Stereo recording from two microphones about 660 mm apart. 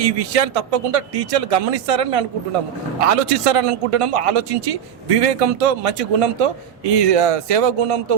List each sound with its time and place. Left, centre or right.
0.0 s a man's voice: right